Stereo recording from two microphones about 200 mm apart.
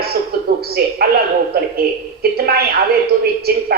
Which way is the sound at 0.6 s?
50° right (ahead or behind).